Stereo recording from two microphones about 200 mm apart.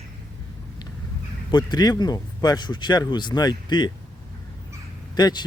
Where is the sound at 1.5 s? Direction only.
20° left (ahead or behind).